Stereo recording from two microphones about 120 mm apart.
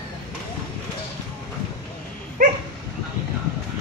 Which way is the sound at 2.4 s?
90° right.